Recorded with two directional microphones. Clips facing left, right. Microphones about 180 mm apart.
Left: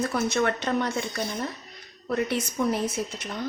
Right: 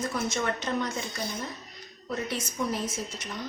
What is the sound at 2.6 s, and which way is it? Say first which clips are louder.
Speech: left 5 dB; 60° left (ahead or behind).